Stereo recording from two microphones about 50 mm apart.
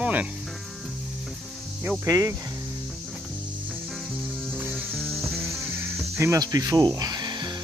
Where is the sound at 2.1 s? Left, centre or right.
Right.